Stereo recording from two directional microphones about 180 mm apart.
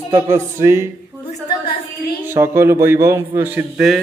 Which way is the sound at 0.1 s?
15° right (ahead or behind).